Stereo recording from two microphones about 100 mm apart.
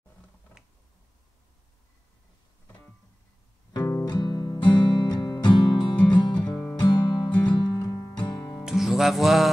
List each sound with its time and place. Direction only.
3.7 s music: 40° left (ahead or behind)
6.4 s music: 20° left (ahead or behind)
6.8 s music: 45° left (ahead or behind)
8.6 s music: 5° right (ahead or behind)